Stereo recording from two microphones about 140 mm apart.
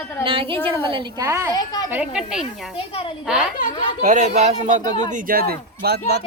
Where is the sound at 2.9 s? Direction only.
45° left (ahead or behind).